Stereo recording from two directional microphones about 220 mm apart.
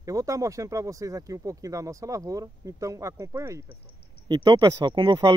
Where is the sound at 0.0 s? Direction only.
15° right (ahead or behind).